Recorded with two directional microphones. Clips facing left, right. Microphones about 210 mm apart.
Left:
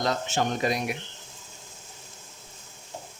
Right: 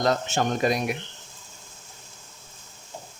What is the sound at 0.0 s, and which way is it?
Speech, 50° right (ahead or behind).